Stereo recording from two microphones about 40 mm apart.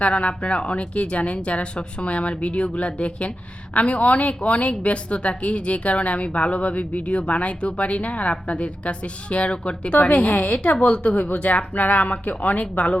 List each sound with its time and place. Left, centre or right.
0.0 s speech: left